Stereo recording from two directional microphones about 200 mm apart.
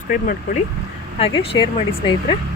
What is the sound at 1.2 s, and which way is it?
Speech, 25° left (ahead or behind).